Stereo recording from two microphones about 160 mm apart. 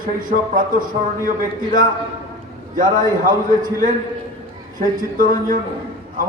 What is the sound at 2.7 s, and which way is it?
Speech, 60° right (ahead or behind).